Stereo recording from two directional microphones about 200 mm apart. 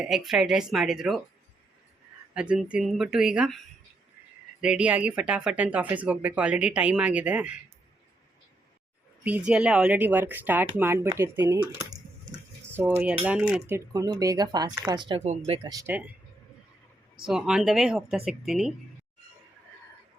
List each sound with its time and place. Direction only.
0.0 s speech: centre (ahead or behind)
2.3 s speech: 5° right (ahead or behind)
4.6 s speech: 5° right (ahead or behind)
9.2 s speech: 5° right (ahead or behind); by 15.7 s 30° right (ahead or behind)
15.7 s speech: 10° right (ahead or behind)
17.2 s speech: 5° right (ahead or behind)